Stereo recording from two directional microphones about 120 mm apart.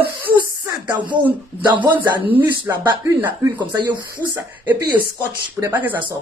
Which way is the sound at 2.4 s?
40° right (ahead or behind).